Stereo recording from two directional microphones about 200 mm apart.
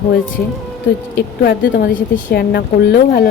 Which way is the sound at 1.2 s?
50° left (ahead or behind).